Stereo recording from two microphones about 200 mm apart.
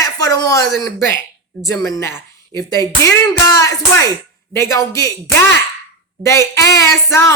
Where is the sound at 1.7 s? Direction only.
15° left (ahead or behind).